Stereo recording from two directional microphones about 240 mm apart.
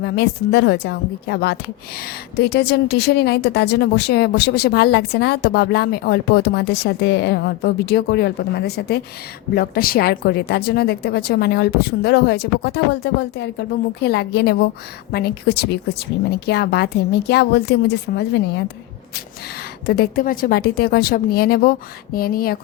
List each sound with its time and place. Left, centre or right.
0.0 s a woman's voice: left
19.9 s speech: left